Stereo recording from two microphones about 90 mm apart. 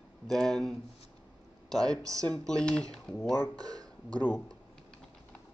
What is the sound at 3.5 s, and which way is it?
Speech, 45° right (ahead or behind).